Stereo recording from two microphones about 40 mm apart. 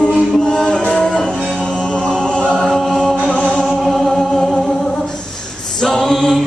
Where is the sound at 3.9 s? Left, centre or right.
Centre.